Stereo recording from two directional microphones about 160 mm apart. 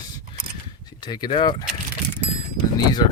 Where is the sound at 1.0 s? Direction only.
25° left (ahead or behind).